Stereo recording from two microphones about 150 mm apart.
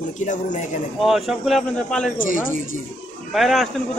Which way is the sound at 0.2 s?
55° left (ahead or behind).